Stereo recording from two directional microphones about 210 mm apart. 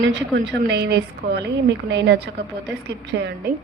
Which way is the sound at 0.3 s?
55° right (ahead or behind).